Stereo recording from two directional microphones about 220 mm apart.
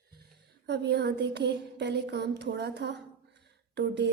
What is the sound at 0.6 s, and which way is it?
A woman's voice, 50° right (ahead or behind).